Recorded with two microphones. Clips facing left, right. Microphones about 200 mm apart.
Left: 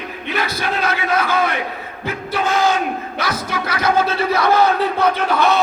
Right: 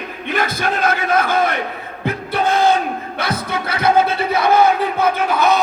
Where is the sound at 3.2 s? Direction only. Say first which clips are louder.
Right 2 dB; 30° right (ahead or behind).